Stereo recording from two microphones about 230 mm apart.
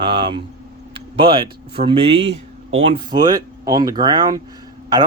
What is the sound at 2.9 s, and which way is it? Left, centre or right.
A man's voice, centre.